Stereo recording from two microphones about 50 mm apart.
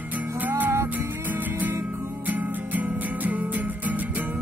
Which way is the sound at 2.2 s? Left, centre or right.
Right.